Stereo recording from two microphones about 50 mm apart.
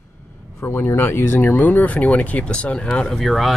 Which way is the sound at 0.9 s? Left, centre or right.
Left.